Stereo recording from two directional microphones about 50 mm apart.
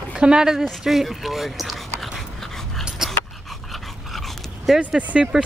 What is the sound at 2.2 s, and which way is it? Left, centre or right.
Dog, centre.